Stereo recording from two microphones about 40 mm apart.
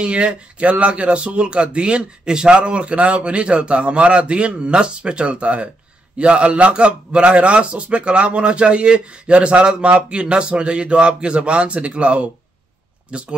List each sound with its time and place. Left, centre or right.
0.0 s a man's voice: right